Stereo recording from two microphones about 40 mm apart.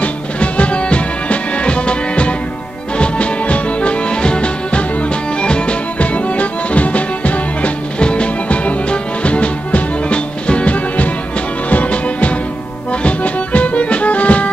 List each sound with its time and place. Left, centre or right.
0.0 s music: left